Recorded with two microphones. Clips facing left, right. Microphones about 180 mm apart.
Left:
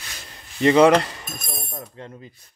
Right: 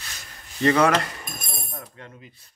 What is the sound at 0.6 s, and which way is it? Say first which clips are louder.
Speech: left 5 dB; 20° left (ahead or behind).